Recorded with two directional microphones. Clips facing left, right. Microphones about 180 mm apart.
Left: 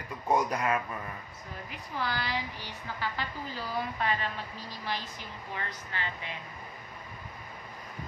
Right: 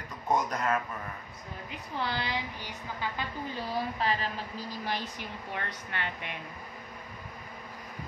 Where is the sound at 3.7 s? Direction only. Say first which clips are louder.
Right 1 dB; 30° right (ahead or behind).